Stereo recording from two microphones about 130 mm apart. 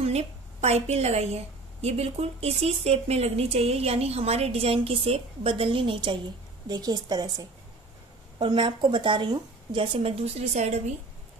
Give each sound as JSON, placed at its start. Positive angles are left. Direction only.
{"t": 0.0, "sound": "a woman's voice", "side_deg": -55}